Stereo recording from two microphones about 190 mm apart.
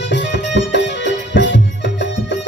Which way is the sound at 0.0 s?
70° left (ahead or behind).